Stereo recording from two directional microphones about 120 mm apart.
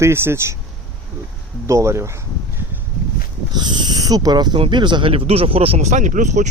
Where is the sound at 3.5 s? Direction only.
35° right (ahead or behind); by 5.9 s 50° right (ahead or behind).